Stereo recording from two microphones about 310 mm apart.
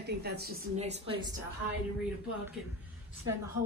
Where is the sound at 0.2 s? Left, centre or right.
Right.